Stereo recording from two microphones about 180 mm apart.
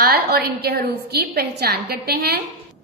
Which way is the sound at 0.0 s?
60° right (ahead or behind).